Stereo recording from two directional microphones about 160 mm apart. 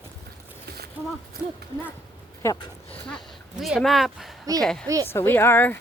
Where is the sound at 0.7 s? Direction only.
80° right.